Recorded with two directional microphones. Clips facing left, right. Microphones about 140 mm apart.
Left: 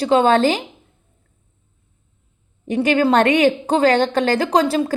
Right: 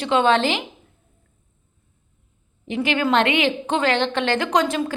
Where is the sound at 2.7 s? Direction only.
40° left (ahead or behind).